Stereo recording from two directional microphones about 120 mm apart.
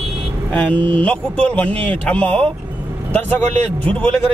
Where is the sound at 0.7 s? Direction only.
45° right (ahead or behind).